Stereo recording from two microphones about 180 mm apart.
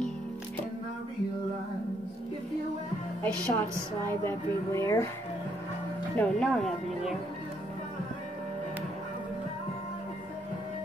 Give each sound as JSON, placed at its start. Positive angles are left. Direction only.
{"t": 3.2, "sound": "speech", "side_deg": 10}
{"t": 6.1, "sound": "speech", "side_deg": 5}